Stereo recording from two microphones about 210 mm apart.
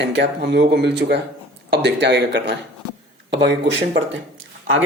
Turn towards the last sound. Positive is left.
turn(degrees=-70)  # may be behind; listen again after turning